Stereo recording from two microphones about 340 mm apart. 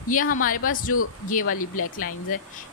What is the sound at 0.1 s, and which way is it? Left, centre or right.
Speech, left.